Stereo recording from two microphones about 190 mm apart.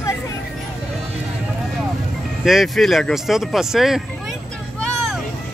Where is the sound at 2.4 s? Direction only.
Centre (ahead or behind).